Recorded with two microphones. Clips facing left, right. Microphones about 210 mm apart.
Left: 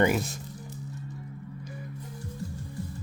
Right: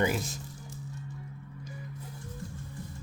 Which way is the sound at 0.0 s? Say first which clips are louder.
Left 5 dB; 60° left (ahead or behind).